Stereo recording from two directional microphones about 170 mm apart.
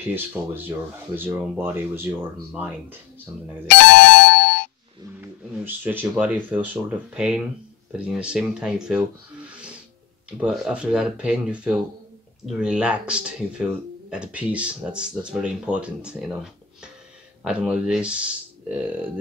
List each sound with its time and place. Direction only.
0.1 s speech: 10° right (ahead or behind)
3.6 s music: 85° left
5.2 s speech: 10° right (ahead or behind)
9.5 s music: 5° right (ahead or behind)
10.3 s speech: 5° right (ahead or behind)
17.4 s speech: 5° right (ahead or behind)